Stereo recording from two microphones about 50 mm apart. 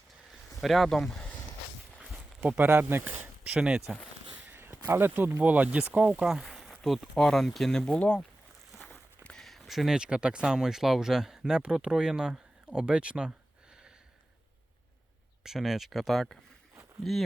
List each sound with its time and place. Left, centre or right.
0.6 s speech: centre
2.6 s speech: right
3.6 s speech: centre
4.4 s a sound: right
5.4 s speech: right
6.2 s speech: centre; by 8.2 s left
8.8 s a sound: left
9.3 s a sound: centre
9.9 s speech: centre
15.4 s speech: centre